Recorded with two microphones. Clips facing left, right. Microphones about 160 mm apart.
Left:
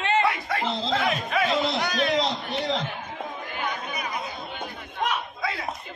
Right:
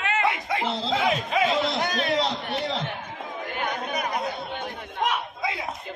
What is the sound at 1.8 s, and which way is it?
Speech, 40° right (ahead or behind).